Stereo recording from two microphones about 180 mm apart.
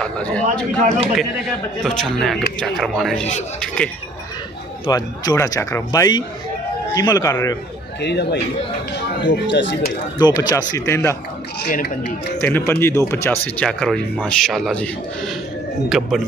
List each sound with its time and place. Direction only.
0.0 s speech: 5° left (ahead or behind)
1.8 s speech: centre (ahead or behind)
4.8 s speech: 20° left (ahead or behind)
8.0 s speech: 65° left (ahead or behind)
10.1 s speech: 20° left (ahead or behind)
11.6 s speech: 65° left (ahead or behind)
12.4 s speech: 10° left (ahead or behind)